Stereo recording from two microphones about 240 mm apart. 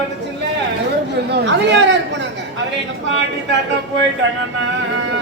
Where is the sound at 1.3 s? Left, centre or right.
Right.